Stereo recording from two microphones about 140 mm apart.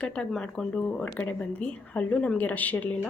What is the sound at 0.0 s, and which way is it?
A woman's voice, 5° left (ahead or behind).